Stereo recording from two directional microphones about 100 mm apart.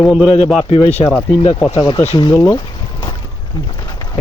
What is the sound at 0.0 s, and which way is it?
Speech, 10° left (ahead or behind).